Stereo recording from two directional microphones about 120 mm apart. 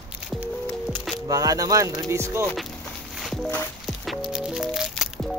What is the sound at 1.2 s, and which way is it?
Speech, 30° right (ahead or behind).